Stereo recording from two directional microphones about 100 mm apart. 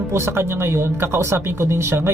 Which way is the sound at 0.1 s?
25° right (ahead or behind).